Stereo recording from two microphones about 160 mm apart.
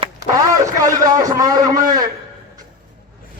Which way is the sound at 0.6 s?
20° right (ahead or behind).